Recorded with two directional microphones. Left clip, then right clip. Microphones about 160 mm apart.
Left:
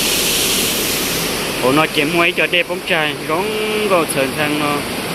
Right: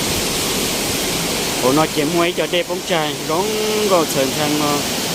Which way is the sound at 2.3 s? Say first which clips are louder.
Left 3 dB; 20° right (ahead or behind).